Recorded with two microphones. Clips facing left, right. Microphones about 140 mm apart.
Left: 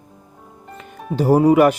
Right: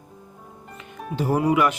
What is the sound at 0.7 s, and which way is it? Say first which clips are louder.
Speech: left 6 dB; 40° left (ahead or behind).